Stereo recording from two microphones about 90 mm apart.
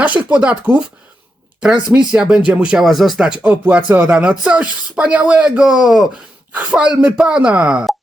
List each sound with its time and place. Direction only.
0.0 s speech: 15° right (ahead or behind)
1.9 s speech: 10° right (ahead or behind)
2.8 s speech: centre (ahead or behind)